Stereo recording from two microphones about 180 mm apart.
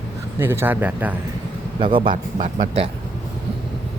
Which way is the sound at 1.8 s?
30° right (ahead or behind).